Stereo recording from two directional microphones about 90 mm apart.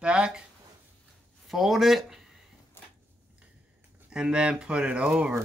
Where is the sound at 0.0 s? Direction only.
10° right (ahead or behind).